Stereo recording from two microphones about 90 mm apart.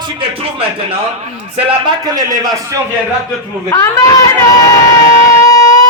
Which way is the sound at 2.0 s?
45° right (ahead or behind).